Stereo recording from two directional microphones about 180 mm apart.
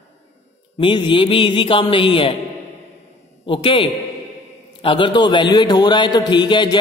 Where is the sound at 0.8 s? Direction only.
25° left (ahead or behind).